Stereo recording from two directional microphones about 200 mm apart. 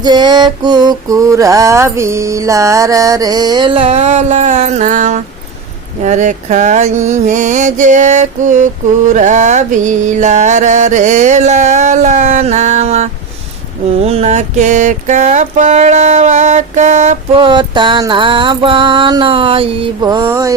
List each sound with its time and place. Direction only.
0.0 s mantra: 20° right (ahead or behind)